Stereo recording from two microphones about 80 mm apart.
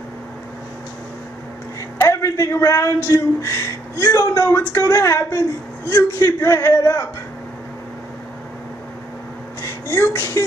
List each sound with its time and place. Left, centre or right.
2.0 s a man's voice: left
9.6 s a sound: left
10.0 s a man's voice: left